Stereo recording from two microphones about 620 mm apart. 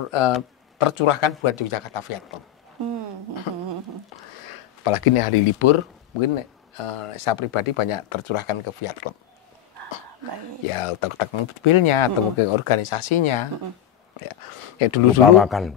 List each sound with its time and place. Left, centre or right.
0.1 s speech: left
3.5 s a sound: left
4.8 s speech: left
10.7 s speech: left
15.3 s speech: centre